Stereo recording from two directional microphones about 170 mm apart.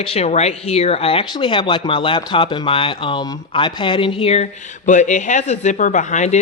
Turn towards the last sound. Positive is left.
turn(degrees=45)  # may be behind; listen again after turning